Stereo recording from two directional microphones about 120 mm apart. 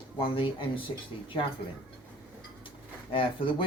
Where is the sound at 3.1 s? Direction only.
45° left (ahead or behind).